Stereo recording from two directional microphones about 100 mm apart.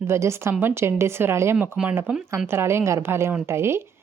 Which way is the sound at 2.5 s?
25° right (ahead or behind).